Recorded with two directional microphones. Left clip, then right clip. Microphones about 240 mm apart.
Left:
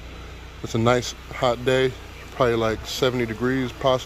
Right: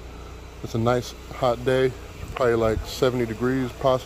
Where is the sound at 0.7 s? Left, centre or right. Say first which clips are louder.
Left 3 dB; centre.